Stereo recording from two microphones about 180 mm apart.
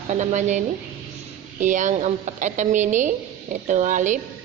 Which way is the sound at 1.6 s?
45° right (ahead or behind).